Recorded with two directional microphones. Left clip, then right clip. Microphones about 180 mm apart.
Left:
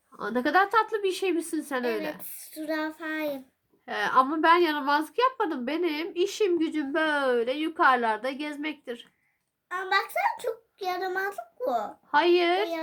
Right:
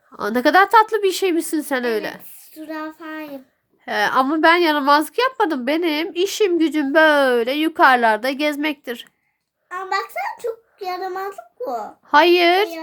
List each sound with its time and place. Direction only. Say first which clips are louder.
0.2 s a woman's voice: right 9 dB; 55° right (ahead or behind)
2.6 s child singing: right 1 dB; 30° left (ahead or behind)
3.8 s a woman's voice: right 6 dB; 50° right (ahead or behind)
9.7 s a child's voice: right 3 dB; 30° left (ahead or behind)
12.1 s a woman's voice: right 9 dB; 50° right (ahead or behind)